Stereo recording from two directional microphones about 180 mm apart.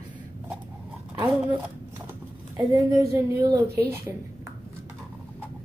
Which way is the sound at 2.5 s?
20° right (ahead or behind).